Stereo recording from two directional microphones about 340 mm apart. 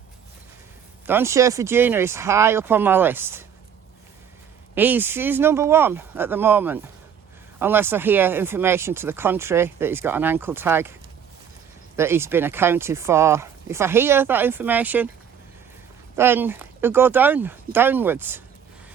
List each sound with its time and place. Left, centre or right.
1.0 s speech: centre
4.7 s speech: centre
11.9 s speech: centre
16.1 s speech: centre